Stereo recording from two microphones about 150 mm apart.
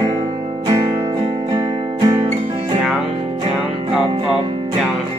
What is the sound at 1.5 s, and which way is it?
Music, 25° right (ahead or behind).